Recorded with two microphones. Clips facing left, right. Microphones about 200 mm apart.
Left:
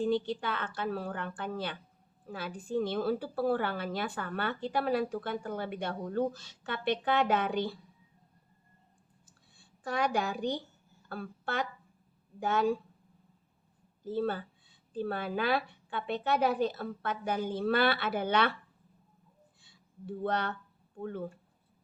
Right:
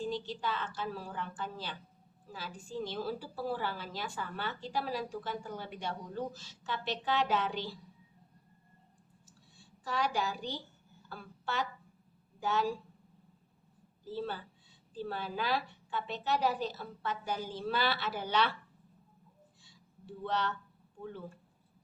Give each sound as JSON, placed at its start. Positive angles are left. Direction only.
{"t": 0.0, "sound": "a woman's voice", "side_deg": 60}
{"t": 9.6, "sound": "a woman's voice", "side_deg": 55}
{"t": 14.0, "sound": "a woman's voice", "side_deg": 55}
{"t": 19.6, "sound": "a sound", "side_deg": 55}
{"t": 21.0, "sound": "a woman's voice", "side_deg": 55}